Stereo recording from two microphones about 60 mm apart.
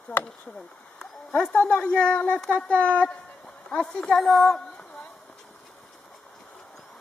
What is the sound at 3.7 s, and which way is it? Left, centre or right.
Speech, centre.